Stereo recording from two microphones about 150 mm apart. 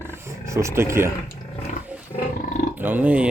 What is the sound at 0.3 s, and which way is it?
Speech, 20° right (ahead or behind).